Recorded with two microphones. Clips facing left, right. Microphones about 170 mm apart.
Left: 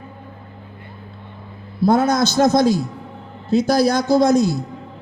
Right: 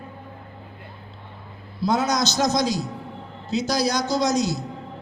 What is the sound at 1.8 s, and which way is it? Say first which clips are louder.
A man's voice: left 6 dB; 55° left (ahead or behind).